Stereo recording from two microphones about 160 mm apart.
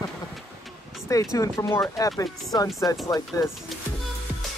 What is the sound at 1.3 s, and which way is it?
Speech, 20° left (ahead or behind).